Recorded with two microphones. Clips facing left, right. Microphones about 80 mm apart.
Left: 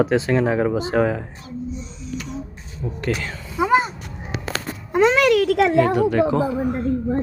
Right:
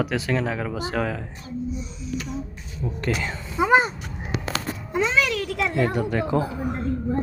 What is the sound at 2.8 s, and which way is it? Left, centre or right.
Speech, centre.